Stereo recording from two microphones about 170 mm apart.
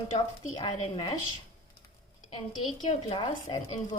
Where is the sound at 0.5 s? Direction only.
30° left (ahead or behind).